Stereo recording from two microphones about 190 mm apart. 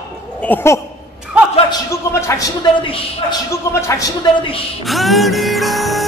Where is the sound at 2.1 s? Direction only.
15° left (ahead or behind).